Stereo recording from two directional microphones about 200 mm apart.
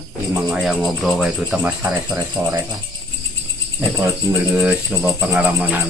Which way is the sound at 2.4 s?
15° right (ahead or behind).